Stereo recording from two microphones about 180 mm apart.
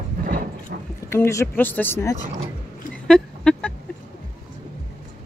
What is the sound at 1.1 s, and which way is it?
Speech, 15° left (ahead or behind).